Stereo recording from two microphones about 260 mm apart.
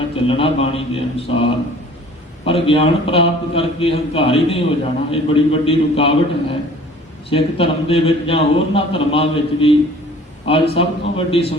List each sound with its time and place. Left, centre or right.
0.3 s speech: left